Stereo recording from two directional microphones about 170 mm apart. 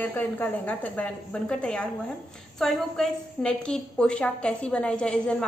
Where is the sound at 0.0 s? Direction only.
10° left (ahead or behind).